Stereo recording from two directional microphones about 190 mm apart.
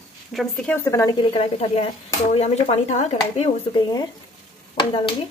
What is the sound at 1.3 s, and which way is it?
Speech, 30° left (ahead or behind).